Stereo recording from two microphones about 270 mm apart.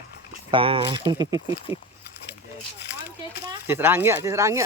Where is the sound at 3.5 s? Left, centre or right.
Centre.